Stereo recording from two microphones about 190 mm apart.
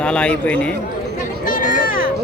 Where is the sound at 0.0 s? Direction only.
5° left (ahead or behind).